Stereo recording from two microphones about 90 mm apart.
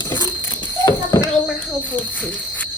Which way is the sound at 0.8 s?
40° left (ahead or behind).